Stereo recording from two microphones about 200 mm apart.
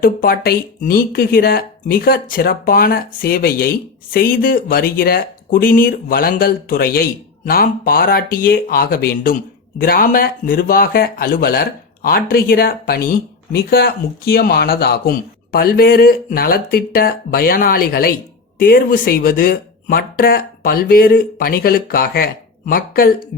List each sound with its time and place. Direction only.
0.0 s speech: 50° left (ahead or behind)